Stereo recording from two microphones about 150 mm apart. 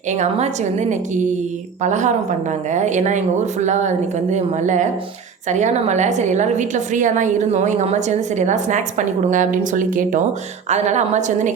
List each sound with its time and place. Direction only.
0.1 s a woman's voice: 50° right (ahead or behind)